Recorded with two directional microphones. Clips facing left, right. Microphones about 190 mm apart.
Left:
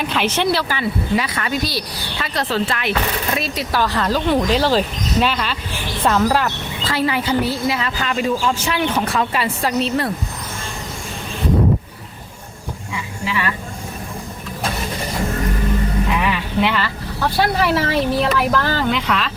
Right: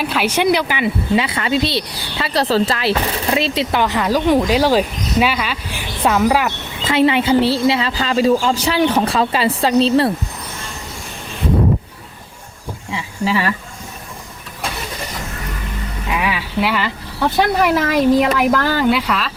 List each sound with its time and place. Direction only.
0.0 s a woman's voice: 5° right (ahead or behind)
6.8 s a woman's voice: 25° right (ahead or behind)
12.9 s insect: 35° right (ahead or behind)
16.0 s a sound: 5° right (ahead or behind)
16.8 s speech: 15° right (ahead or behind)